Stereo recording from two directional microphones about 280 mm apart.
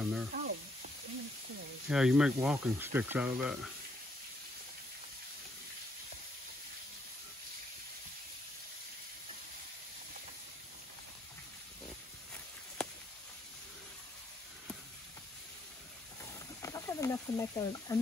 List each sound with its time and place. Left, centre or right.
0.0 s sizzle: centre
0.3 s sizzle: right
1.9 s speech: centre
16.6 s a sound: centre